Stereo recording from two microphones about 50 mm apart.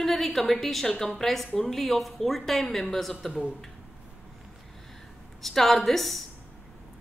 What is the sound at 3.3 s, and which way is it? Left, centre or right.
Speech, centre.